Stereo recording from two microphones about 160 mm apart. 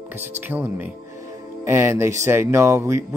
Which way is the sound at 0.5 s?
10° right (ahead or behind).